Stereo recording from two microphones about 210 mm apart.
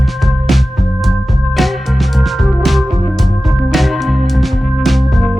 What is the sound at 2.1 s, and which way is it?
Music, centre (ahead or behind).